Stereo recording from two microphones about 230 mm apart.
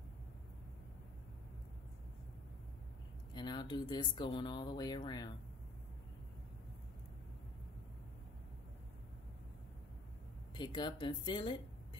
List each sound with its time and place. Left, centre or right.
3.3 s speech: centre
10.5 s speech: centre